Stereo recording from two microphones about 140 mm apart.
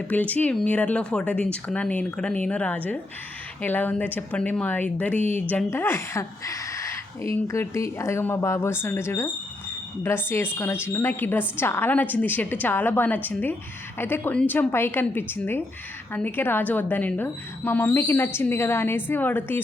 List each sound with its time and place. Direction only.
0.1 s a woman's voice: 10° left (ahead or behind)